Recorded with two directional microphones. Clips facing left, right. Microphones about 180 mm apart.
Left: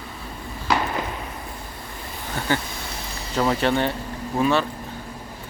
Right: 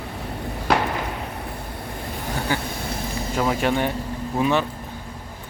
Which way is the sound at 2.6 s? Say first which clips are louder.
Right 5 dB; 55° right (ahead or behind).